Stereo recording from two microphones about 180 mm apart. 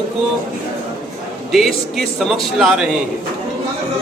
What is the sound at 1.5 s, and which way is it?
Speech, centre (ahead or behind).